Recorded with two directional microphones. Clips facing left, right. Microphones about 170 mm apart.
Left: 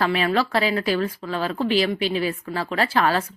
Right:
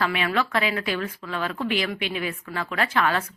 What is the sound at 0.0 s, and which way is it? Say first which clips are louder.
A woman's voice: left 4 dB; 35° left (ahead or behind).